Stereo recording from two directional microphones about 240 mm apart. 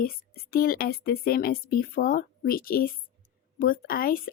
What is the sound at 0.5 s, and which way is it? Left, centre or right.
Speech, left.